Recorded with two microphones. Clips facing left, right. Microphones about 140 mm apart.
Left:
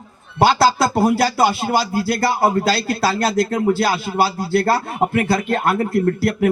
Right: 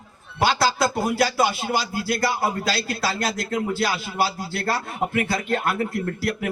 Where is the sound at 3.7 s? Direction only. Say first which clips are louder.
Left 5 dB; 35° left (ahead or behind).